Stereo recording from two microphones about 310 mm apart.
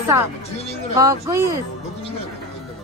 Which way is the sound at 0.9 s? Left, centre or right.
Centre.